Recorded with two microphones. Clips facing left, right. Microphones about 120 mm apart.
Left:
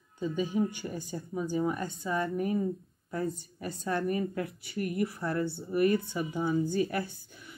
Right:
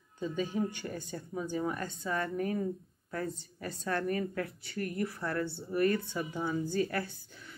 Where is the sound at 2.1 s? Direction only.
15° left (ahead or behind).